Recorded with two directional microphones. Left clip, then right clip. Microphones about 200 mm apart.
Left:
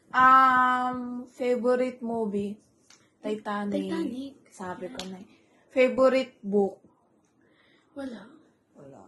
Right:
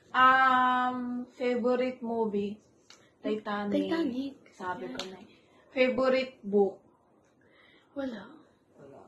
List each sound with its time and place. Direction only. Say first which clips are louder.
0.1 s a sound: left 4 dB; 50° left (ahead or behind)
3.4 s speech: left 2 dB; 50° left (ahead or behind)
3.9 s a woman's voice: right 1 dB; centre (ahead or behind)
5.7 s speech: left 5 dB; 50° left (ahead or behind)
7.9 s a woman's voice: right 2 dB; centre (ahead or behind)